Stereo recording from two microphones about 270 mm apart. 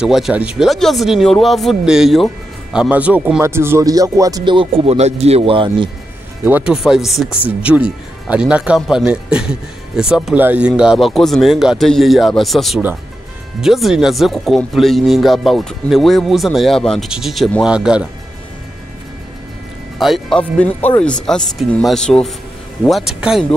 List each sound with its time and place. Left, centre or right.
0.0 s speech: centre
6.4 s speech: centre
20.0 s speech: centre